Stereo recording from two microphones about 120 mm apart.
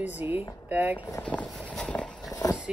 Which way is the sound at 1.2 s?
10° left (ahead or behind).